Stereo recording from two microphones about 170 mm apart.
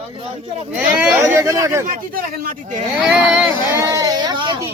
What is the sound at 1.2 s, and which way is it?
Speech, 20° right (ahead or behind).